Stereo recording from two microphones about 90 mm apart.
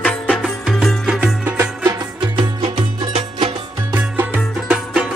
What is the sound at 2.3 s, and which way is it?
Music, 90° right.